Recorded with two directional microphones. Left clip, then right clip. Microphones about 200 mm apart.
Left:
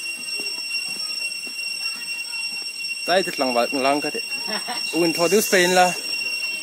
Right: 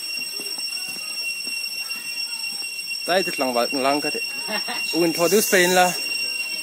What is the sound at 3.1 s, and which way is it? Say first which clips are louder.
Speech: left 1 dB; 15° left (ahead or behind).